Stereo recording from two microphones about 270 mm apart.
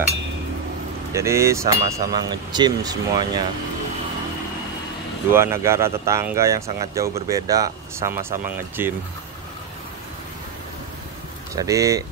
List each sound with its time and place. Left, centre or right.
1.1 s speech: centre
5.3 s speech: centre
11.5 s speech: centre